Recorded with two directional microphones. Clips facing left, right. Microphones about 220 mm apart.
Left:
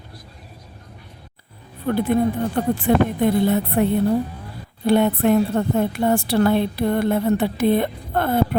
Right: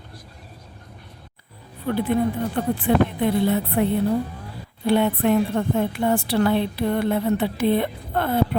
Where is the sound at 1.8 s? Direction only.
45° left (ahead or behind).